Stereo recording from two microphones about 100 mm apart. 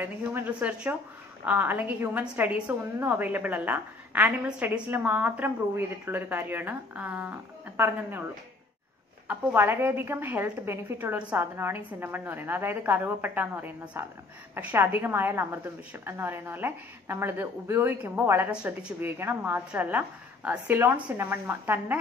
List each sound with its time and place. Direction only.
0.0 s a woman's voice: 20° right (ahead or behind)
9.3 s a woman's voice: 20° right (ahead or behind)
18.5 s a woman's voice: 10° right (ahead or behind)